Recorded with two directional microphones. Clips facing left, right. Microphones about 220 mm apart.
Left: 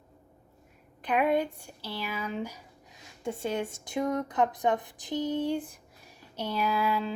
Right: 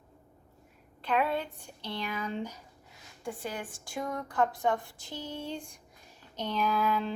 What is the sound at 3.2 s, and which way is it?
A woman's voice, 25° left (ahead or behind).